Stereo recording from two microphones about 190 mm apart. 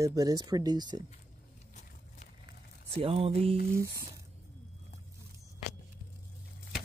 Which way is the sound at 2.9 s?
30° right (ahead or behind).